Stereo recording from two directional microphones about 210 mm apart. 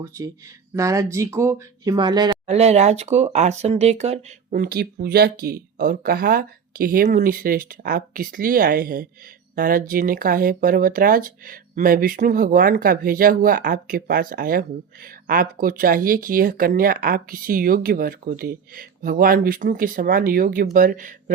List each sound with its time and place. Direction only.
0.0 s speech: 15° right (ahead or behind)
2.5 s speech: 30° right (ahead or behind)
4.6 s speech: 45° right (ahead or behind)